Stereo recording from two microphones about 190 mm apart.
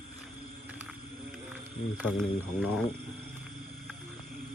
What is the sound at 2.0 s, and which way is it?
Speech, 10° right (ahead or behind).